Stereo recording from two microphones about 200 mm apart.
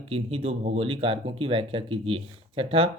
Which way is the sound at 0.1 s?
30° right (ahead or behind).